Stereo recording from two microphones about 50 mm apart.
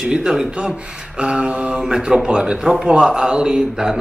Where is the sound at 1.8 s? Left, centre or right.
Centre.